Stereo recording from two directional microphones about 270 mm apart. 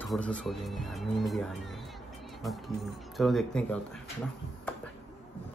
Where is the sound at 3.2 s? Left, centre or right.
Centre.